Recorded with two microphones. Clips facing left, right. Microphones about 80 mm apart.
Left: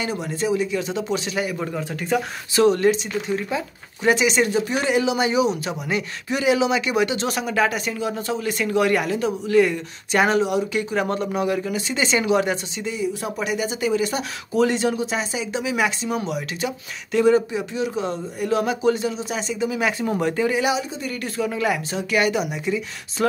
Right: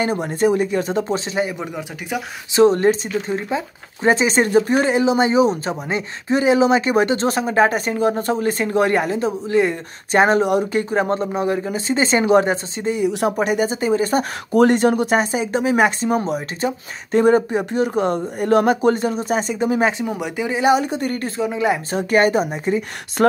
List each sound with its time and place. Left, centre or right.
0.0 s speech: right
1.8 s speech: centre
2.5 s speech: right
13.0 s speech: right
13.4 s speech: right
20.1 s speech: centre
20.7 s speech: right
21.4 s speech: right
21.9 s speech: right